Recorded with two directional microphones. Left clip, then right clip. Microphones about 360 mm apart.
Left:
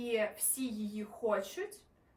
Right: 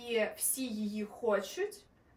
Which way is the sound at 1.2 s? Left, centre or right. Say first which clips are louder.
Right 2 dB; centre.